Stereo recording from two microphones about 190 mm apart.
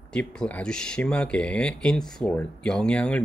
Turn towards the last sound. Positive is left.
turn(degrees=5)  # may be behind; listen again after turning